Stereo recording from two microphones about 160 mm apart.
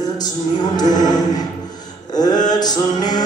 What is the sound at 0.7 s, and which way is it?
Music, 25° left (ahead or behind).